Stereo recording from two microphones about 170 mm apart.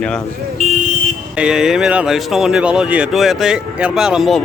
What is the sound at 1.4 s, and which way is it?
Speech, 5° right (ahead or behind).